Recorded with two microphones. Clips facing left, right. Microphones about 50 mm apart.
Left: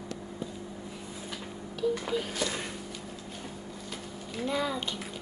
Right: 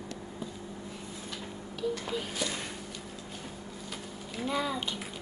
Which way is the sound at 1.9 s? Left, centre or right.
Centre.